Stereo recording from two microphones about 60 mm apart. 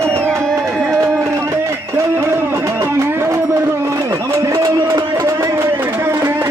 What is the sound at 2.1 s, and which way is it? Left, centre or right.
Music, right.